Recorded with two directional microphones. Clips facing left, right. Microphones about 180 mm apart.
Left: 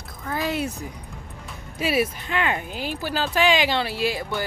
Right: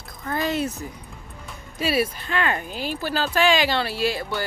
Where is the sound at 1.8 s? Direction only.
15° left (ahead or behind).